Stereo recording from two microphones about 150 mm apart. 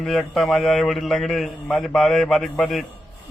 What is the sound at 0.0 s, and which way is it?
A man's voice, centre (ahead or behind).